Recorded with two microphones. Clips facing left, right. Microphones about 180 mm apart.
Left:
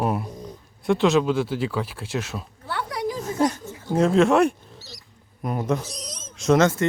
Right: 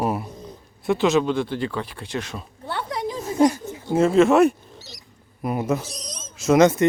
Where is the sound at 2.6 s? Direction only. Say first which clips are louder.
Even; 25° right (ahead or behind).